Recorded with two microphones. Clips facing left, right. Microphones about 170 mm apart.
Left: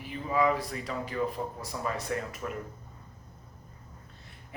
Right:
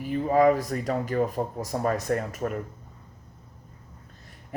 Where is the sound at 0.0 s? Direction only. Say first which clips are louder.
Right 7 dB; 45° right (ahead or behind).